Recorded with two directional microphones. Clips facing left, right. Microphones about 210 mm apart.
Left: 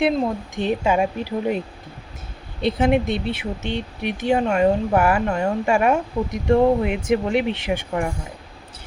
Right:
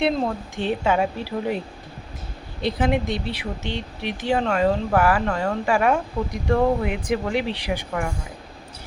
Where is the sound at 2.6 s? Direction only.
25° left (ahead or behind).